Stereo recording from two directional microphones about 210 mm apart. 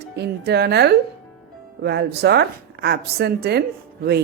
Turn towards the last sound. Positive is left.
turn(degrees=-50)  # may be behind; listen again after turning